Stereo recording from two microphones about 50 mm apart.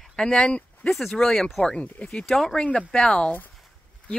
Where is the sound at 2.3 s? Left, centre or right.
Centre.